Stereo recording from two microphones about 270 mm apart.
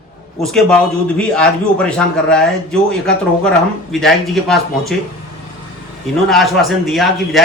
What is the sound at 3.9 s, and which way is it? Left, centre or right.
A man's voice, centre.